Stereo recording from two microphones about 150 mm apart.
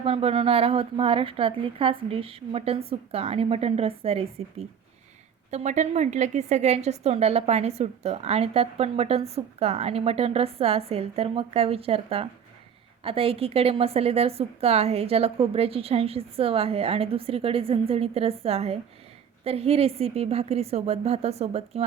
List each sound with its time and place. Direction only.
0.0 s a woman's voice: 40° right (ahead or behind)